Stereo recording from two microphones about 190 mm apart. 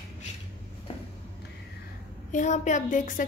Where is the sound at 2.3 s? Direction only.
40° left (ahead or behind).